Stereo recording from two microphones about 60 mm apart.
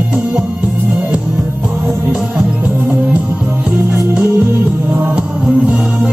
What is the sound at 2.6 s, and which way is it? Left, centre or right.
Music, right.